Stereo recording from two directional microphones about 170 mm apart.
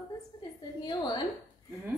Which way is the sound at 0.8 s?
25° left (ahead or behind).